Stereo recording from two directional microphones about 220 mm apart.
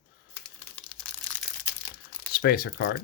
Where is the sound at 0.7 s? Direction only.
5° left (ahead or behind).